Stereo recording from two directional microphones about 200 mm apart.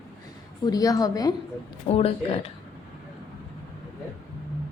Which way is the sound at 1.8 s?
30° left (ahead or behind).